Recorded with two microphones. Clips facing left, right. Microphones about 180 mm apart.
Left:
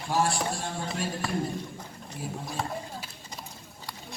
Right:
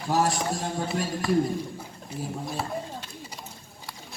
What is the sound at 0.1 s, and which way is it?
Music, 40° right (ahead or behind).